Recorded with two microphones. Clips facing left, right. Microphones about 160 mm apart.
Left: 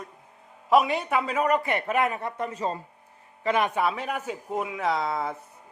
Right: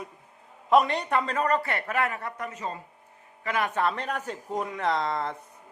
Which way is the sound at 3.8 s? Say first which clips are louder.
Left 1 dB; 5° left (ahead or behind).